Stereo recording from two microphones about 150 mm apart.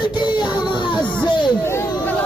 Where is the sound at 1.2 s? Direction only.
30° left (ahead or behind).